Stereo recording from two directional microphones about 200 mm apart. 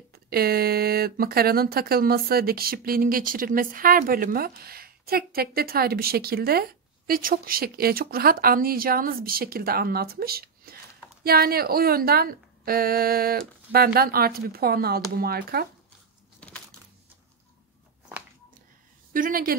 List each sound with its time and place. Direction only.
0.1 s speech: 50° right (ahead or behind)
16.3 s a sound: 5° left (ahead or behind)
19.1 s speech: 45° right (ahead or behind)